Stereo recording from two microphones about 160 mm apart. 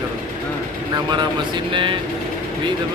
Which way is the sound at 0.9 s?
30° right (ahead or behind).